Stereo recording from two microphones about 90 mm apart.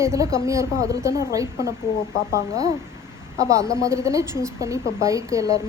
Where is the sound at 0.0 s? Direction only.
35° right (ahead or behind).